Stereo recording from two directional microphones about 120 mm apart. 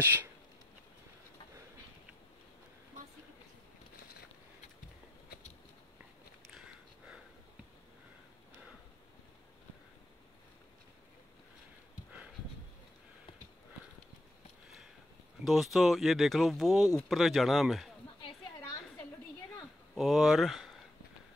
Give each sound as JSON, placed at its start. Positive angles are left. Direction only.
{"t": 0.0, "sound": "speech", "side_deg": -15}
{"t": 6.5, "sound": "a sound", "side_deg": -5}
{"t": 15.4, "sound": "speech", "side_deg": 0}
{"t": 20.0, "sound": "speech", "side_deg": 0}